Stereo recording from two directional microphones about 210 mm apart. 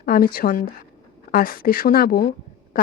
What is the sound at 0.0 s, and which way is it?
Speech, 45° left (ahead or behind).